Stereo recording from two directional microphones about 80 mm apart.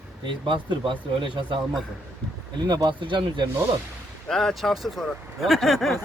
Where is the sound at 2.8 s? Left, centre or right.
Right.